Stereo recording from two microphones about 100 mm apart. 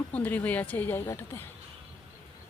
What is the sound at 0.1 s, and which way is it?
Speech, 15° left (ahead or behind).